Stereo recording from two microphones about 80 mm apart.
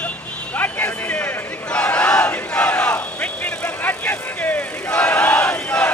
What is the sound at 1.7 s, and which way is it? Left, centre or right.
Battle cry, centre.